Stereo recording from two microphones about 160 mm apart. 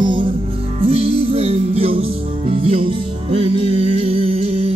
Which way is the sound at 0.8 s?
40° right (ahead or behind).